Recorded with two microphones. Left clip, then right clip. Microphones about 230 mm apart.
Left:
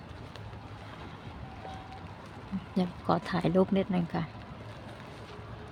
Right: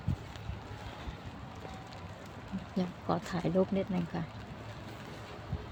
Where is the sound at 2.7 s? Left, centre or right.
Left.